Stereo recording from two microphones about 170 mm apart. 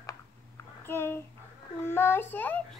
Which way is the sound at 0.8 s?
15° left (ahead or behind).